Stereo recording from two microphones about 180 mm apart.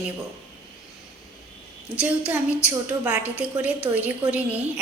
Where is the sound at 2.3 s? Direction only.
10° right (ahead or behind).